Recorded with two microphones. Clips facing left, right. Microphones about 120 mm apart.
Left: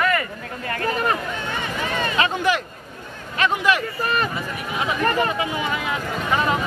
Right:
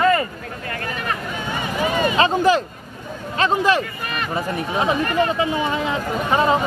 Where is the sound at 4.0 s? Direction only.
35° left (ahead or behind).